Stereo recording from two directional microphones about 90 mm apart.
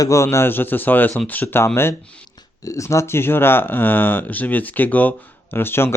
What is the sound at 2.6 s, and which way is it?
Speech, 35° left (ahead or behind).